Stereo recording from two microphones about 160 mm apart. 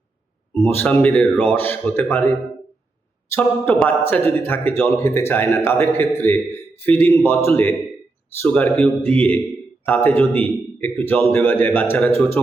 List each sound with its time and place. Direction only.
0.6 s speech: 10° left (ahead or behind)
3.3 s speech: 10° left (ahead or behind)